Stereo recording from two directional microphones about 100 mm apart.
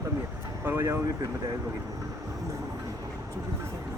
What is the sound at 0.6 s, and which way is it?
Speech, 25° right (ahead or behind).